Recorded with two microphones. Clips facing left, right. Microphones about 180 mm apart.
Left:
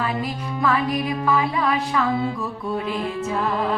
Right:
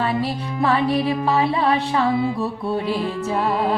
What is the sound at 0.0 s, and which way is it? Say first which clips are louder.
Music: right 3 dB; 30° right (ahead or behind).